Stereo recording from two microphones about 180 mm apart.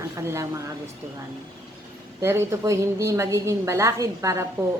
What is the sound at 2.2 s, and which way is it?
Speech, 15° right (ahead or behind).